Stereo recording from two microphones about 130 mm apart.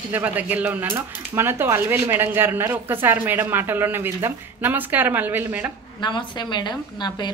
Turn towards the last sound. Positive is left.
turn(degrees=35)  # may be behind; listen again after turning